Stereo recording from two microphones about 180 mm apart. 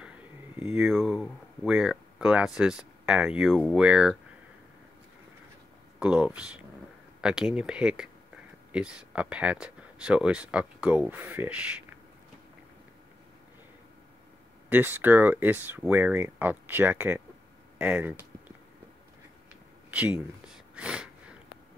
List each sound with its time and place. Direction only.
0.6 s speech: 5° right (ahead or behind)
5.9 s speech: 5° right (ahead or behind)
14.7 s speech: 10° right (ahead or behind)
19.9 s a sound: 5° right (ahead or behind)